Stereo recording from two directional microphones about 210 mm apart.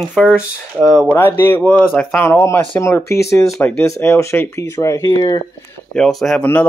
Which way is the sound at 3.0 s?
50° left (ahead or behind).